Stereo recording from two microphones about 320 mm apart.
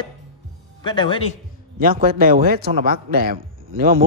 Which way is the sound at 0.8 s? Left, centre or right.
Centre.